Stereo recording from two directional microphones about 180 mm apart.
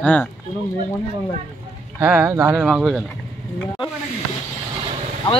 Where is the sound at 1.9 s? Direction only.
15° right (ahead or behind).